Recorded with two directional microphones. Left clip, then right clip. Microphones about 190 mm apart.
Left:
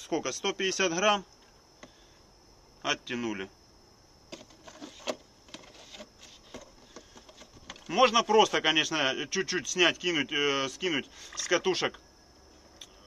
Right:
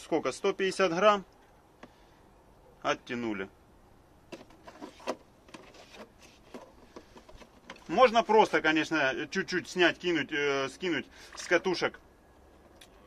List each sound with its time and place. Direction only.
0.0 s speech: 20° right (ahead or behind)
2.8 s speech: 15° right (ahead or behind)
7.9 s speech: 10° right (ahead or behind)